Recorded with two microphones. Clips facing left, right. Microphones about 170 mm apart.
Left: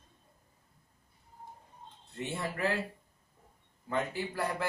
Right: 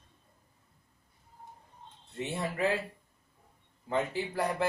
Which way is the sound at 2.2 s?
20° right (ahead or behind).